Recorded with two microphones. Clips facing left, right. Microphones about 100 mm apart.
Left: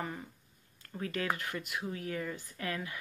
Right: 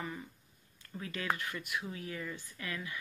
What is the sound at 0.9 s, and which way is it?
Speech, 45° left (ahead or behind).